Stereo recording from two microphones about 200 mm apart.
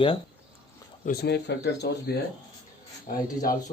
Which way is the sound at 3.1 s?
45° left (ahead or behind).